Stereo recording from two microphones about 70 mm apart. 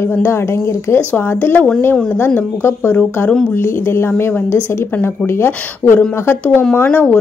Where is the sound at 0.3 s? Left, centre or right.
Left.